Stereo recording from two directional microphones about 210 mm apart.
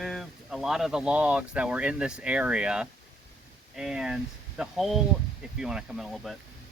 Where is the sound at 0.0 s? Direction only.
Centre (ahead or behind).